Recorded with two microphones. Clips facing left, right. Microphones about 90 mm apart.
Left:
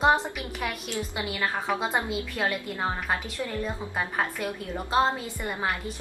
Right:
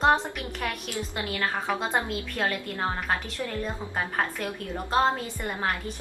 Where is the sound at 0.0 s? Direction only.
10° left (ahead or behind).